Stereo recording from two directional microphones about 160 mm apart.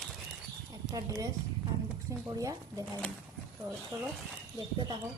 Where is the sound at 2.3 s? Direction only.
20° right (ahead or behind).